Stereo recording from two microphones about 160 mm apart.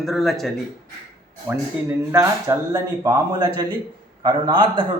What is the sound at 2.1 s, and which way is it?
A man's voice, 15° right (ahead or behind).